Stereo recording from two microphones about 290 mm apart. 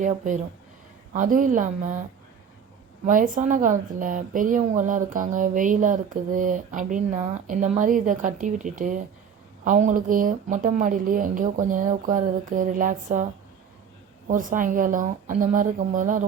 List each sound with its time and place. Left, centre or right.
0.0 s a woman's voice: right
3.1 s a woman's voice: right
14.3 s a woman's voice: right